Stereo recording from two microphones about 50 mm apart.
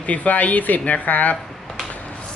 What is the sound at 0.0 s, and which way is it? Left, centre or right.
Speech, left.